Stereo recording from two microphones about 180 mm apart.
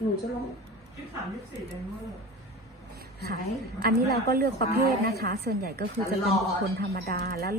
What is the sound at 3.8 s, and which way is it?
A woman's voice, 60° right (ahead or behind).